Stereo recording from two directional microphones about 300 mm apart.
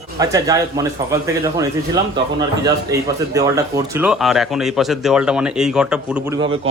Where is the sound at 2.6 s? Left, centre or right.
Centre.